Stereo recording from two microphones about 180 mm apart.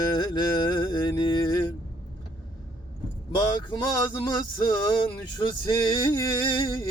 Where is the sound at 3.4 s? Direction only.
25° left (ahead or behind).